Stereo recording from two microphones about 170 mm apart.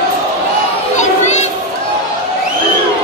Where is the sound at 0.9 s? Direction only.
45° left (ahead or behind).